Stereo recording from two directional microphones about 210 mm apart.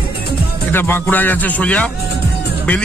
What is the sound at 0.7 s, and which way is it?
Music, 10° left (ahead or behind).